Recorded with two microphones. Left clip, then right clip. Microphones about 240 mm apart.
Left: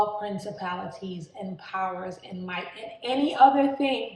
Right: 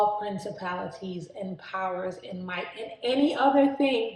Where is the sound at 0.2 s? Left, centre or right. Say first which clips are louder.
Even; centre.